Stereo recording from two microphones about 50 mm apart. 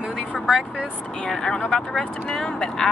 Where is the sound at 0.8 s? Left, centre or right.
Left.